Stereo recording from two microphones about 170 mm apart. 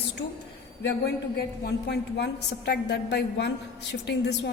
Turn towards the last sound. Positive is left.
turn(degrees=90)